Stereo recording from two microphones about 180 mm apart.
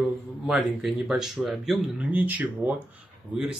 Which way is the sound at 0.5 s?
Centre (ahead or behind).